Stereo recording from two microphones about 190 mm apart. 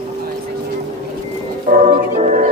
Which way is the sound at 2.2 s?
35° right (ahead or behind).